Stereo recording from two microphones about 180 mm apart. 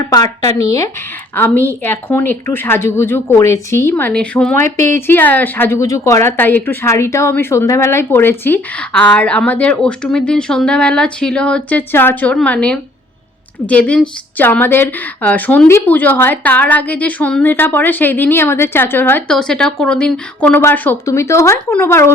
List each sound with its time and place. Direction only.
0.1 s speech: 20° left (ahead or behind)